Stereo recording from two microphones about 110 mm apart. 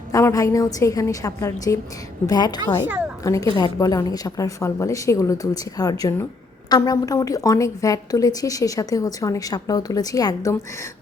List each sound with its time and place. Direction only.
0.1 s a woman's voice: 30° left (ahead or behind)
2.8 s speech: 15° right (ahead or behind)
3.6 s a woman's voice: 35° left (ahead or behind)